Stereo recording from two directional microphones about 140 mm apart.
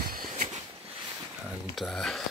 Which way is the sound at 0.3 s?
55° right (ahead or behind).